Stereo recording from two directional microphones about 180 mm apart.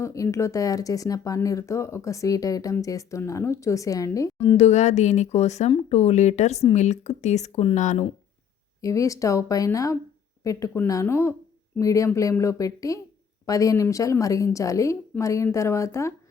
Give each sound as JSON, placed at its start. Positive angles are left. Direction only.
{"t": 0.0, "sound": "speech", "side_deg": 15}
{"t": 4.4, "sound": "speech", "side_deg": 35}
{"t": 8.8, "sound": "speech", "side_deg": 15}